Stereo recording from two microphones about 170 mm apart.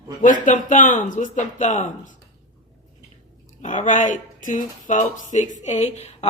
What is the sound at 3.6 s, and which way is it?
Speech, 45° left (ahead or behind).